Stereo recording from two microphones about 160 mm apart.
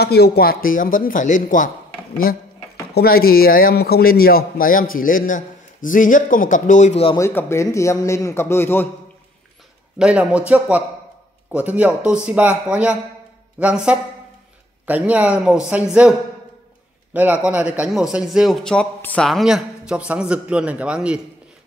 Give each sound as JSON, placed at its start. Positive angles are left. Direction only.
{"t": 0.0, "sound": "a man's voice", "side_deg": 80}
{"t": 7.2, "sound": "a man's voice", "side_deg": 15}
{"t": 9.9, "sound": "a man's voice", "side_deg": -5}